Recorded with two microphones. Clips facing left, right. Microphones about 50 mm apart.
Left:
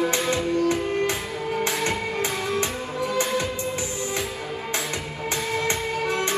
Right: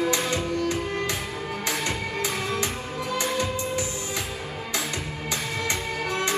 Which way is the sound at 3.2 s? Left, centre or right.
Left.